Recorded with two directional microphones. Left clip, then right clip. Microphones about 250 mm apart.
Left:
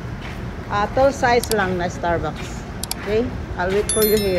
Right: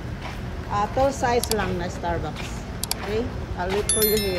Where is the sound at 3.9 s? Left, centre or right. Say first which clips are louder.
Left 5 dB; centre.